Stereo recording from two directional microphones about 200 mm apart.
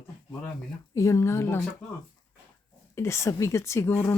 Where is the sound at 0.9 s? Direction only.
15° left (ahead or behind).